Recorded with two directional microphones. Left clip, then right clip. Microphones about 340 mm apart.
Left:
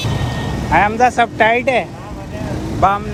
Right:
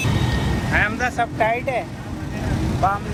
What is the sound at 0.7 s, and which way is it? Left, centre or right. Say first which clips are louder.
Speech: left 9 dB; centre.